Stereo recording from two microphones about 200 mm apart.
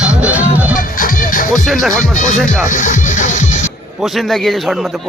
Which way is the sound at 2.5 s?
40° left (ahead or behind).